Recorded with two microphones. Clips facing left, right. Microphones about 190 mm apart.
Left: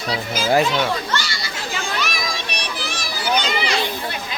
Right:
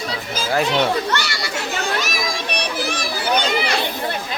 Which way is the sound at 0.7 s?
65° right (ahead or behind).